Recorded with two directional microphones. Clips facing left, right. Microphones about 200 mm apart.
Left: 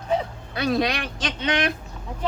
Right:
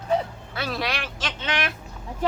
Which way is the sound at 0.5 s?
20° left (ahead or behind).